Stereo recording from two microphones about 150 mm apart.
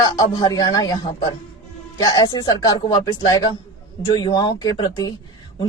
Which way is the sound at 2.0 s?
30° left (ahead or behind).